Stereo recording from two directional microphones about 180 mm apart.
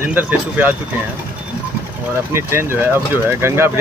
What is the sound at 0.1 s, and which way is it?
Speech, 10° right (ahead or behind).